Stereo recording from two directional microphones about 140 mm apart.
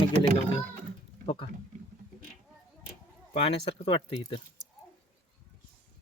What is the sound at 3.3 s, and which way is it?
Speech, 45° left (ahead or behind).